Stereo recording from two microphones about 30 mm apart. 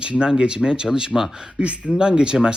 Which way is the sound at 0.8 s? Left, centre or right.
Right.